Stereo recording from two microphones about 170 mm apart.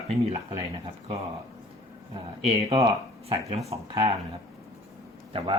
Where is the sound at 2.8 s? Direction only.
25° right (ahead or behind).